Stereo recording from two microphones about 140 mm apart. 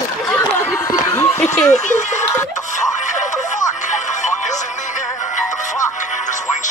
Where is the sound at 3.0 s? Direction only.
60° left (ahead or behind).